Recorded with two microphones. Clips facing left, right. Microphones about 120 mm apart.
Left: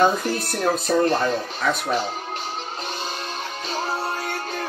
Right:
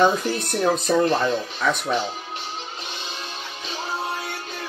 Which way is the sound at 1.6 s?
Centre (ahead or behind).